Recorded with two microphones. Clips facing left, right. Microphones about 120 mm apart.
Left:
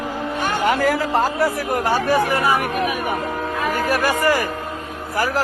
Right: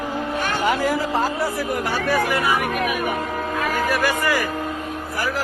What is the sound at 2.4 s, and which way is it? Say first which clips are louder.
Speech: left 2 dB; 30° left (ahead or behind).